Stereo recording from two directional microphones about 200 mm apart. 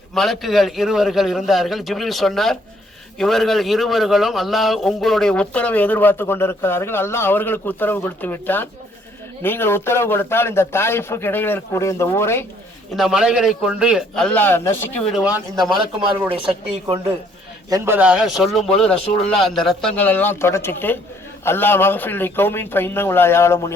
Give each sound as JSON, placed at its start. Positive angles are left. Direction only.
{"t": 0.1, "sound": "a man's voice", "side_deg": 0}
{"t": 13.0, "sound": "a man's voice", "side_deg": -5}
{"t": 15.1, "sound": "a man's voice", "side_deg": -5}
{"t": 16.3, "sound": "speech", "side_deg": -25}
{"t": 17.7, "sound": "a man's voice", "side_deg": -15}